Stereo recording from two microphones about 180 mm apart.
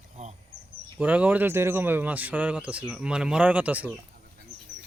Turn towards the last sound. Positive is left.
turn(degrees=-10)  # may be behind; listen again after turning